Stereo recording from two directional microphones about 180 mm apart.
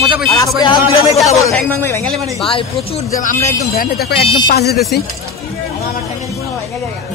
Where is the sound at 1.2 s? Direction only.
15° left (ahead or behind).